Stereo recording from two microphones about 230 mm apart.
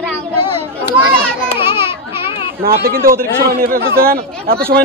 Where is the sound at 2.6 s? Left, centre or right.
Right.